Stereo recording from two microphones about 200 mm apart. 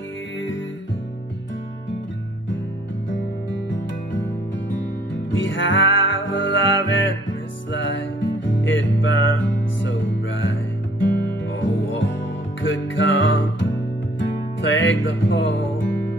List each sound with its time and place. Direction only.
3.1 s music: 65° left (ahead or behind)